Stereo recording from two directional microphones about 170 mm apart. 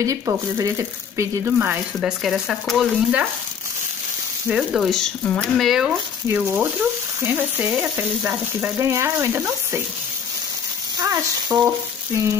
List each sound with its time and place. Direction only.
0.0 s speech: 20° right (ahead or behind); by 3.3 s 5° right (ahead or behind)
4.5 s speech: 5° right (ahead or behind)
7.2 s frying: 10° right (ahead or behind)
11.0 s frying: 20° right (ahead or behind)